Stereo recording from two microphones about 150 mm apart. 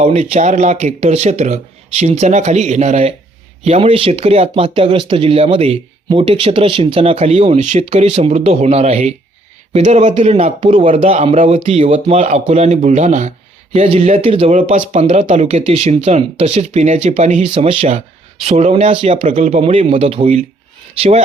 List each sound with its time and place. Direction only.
0.0 s speech: 45° right (ahead or behind)
13.7 s speech: 40° right (ahead or behind)
14.9 s speech: 50° right (ahead or behind)
17.5 s speech: 40° right (ahead or behind)